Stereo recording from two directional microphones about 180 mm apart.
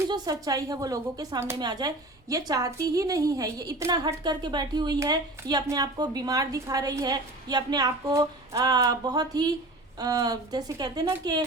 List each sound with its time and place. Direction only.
0.1 s a woman's voice: 20° right (ahead or behind)